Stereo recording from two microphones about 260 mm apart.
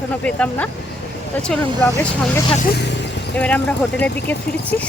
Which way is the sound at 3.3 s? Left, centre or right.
Centre.